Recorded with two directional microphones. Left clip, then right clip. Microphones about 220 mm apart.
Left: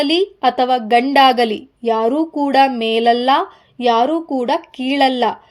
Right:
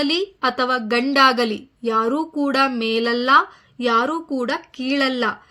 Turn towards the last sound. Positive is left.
turn(degrees=5)  # may be behind; listen again after turning